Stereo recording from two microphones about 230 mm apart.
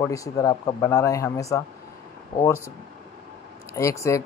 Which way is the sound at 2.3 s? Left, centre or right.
Left.